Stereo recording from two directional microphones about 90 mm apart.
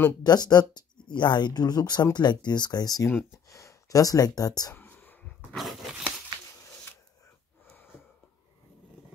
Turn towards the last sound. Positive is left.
turn(degrees=25)  # may be behind; listen again after turning